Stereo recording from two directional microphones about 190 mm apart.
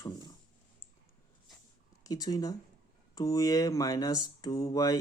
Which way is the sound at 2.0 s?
20° left (ahead or behind).